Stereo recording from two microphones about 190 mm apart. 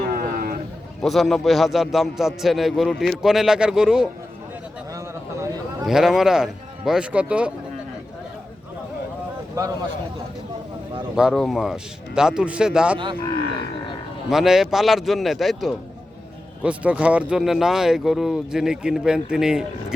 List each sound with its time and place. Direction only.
0.1 s a sound: 50° right (ahead or behind)
1.0 s a man's voice: centre (ahead or behind)
4.9 s a sound: 15° right (ahead or behind)
5.8 s a man's voice: centre (ahead or behind)
11.1 s a man's voice: 5° right (ahead or behind)
14.3 s a man's voice: centre (ahead or behind)